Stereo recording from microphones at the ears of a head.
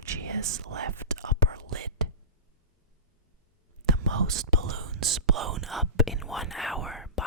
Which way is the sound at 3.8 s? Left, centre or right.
Right.